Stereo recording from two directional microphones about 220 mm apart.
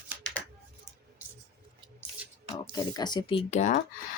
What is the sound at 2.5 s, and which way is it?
Speech, 15° left (ahead or behind).